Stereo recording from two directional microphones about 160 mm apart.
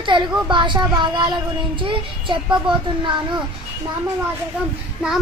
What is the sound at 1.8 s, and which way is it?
Child singing, 30° right (ahead or behind).